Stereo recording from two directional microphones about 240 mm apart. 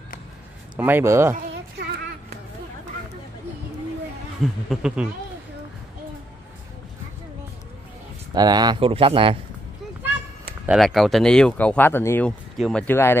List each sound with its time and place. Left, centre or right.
0.7 s speech: centre
1.3 s a sound: right
4.4 s speech: centre
8.4 s speech: centre
10.7 s speech: centre